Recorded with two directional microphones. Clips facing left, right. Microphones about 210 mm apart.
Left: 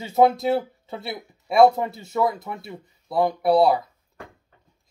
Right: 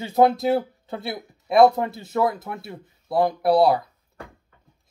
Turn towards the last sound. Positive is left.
turn(degrees=0)  # may be behind; listen again after turning